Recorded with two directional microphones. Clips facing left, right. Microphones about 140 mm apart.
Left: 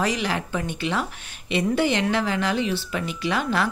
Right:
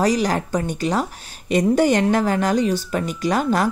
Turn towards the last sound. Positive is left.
turn(degrees=-40)  # may be behind; listen again after turning